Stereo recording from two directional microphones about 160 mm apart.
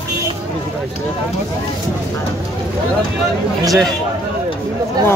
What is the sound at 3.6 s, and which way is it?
Speech, centre (ahead or behind).